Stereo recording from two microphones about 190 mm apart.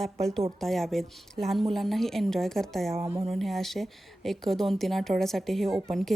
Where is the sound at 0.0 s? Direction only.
Centre (ahead or behind).